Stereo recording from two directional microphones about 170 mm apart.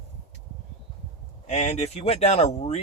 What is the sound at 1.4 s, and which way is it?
Speech, 40° left (ahead or behind).